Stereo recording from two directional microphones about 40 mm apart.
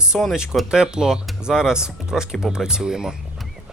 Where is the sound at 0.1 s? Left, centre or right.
Centre.